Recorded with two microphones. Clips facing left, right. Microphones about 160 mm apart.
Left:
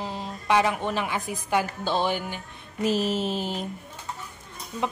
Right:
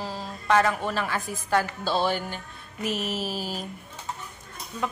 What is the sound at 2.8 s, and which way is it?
Speech, 30° left (ahead or behind).